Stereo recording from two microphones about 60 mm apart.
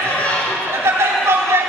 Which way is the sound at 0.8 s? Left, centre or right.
Right.